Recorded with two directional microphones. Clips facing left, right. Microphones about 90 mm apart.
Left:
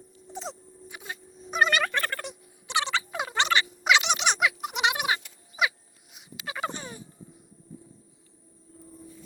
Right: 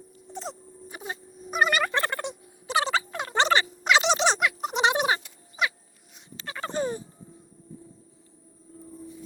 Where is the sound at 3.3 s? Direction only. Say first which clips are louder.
Right 4 dB; 35° right (ahead or behind).